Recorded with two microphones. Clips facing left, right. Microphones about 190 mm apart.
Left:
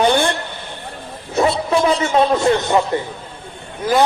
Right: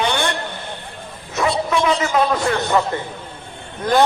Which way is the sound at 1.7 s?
35° left (ahead or behind).